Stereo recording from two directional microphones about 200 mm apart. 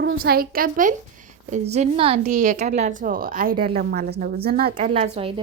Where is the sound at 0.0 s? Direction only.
60° right (ahead or behind).